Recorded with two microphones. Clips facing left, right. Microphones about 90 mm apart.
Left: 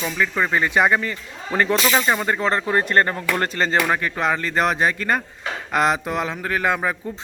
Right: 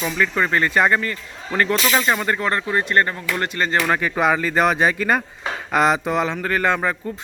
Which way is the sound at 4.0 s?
5° right (ahead or behind).